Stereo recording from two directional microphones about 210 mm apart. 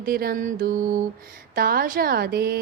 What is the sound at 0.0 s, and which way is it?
A woman's voice, 45° right (ahead or behind).